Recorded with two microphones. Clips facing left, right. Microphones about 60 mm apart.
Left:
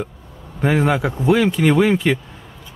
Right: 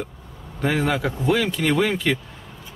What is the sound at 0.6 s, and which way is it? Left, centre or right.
Speech, centre.